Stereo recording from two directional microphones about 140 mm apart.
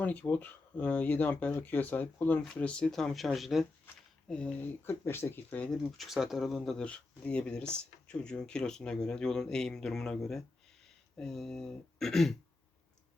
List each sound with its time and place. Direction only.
0.0 s speech: 10° left (ahead or behind)
4.9 s speech: 15° left (ahead or behind)
5.7 s speech: centre (ahead or behind)